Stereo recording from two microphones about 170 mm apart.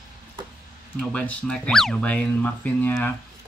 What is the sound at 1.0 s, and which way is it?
Speech, 5° left (ahead or behind).